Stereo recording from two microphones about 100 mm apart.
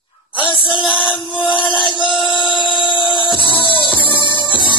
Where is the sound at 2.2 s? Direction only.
50° left (ahead or behind).